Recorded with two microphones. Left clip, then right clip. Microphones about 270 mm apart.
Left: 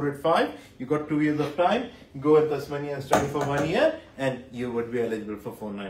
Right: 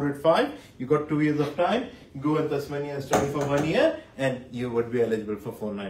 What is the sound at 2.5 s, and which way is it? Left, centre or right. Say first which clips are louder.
Speech: even; left.